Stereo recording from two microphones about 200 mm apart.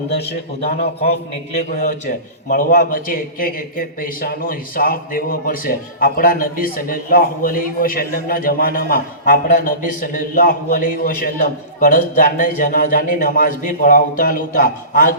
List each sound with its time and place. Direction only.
0.1 s a man's voice: 55° left (ahead or behind)
0.8 s a man's voice: 30° left (ahead or behind)